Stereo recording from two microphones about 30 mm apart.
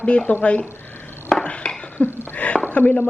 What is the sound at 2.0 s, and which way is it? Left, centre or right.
Speech, left.